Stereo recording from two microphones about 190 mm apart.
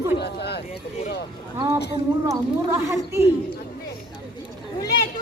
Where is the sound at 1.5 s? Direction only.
15° right (ahead or behind).